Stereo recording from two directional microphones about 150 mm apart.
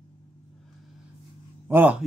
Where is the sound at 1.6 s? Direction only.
15° right (ahead or behind).